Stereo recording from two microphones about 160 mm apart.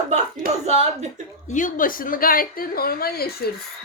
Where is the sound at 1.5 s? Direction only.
55° left (ahead or behind); by 3.5 s 75° left (ahead or behind).